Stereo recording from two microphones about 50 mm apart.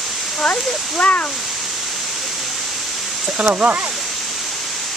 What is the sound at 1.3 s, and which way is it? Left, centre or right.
Pink noise, centre.